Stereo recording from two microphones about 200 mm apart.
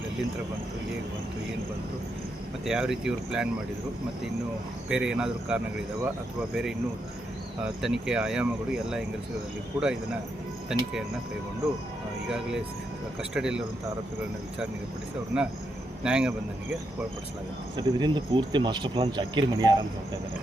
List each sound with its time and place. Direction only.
2.6 s speech: 5° right (ahead or behind)
4.9 s speech: 5° right (ahead or behind)
7.8 s speech: 5° right (ahead or behind)
13.3 s speech: 5° right (ahead or behind)
15.3 s speech: 5° right (ahead or behind)
17.7 s speech: 20° right (ahead or behind)